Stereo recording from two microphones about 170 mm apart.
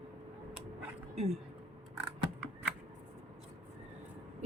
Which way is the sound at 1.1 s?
40° right (ahead or behind).